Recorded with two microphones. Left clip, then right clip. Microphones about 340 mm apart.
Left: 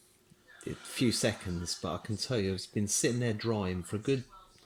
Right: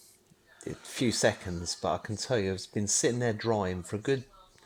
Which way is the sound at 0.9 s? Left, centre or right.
Centre.